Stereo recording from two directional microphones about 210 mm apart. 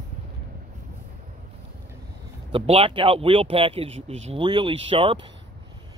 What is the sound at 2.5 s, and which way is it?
Speech, 25° right (ahead or behind).